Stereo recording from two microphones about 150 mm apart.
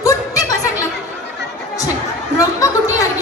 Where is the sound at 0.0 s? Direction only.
20° left (ahead or behind).